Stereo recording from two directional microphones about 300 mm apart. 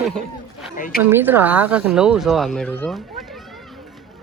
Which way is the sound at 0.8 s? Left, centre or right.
Left.